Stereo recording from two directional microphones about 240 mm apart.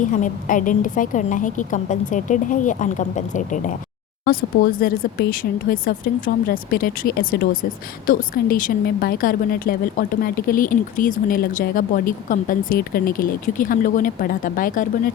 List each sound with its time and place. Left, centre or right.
0.0 s a woman's voice: left